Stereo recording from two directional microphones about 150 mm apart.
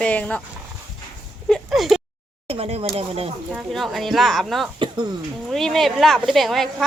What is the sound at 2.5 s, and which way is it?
Speech, 40° right (ahead or behind).